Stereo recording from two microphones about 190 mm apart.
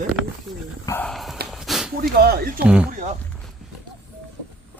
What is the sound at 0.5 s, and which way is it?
Dog, centre (ahead or behind).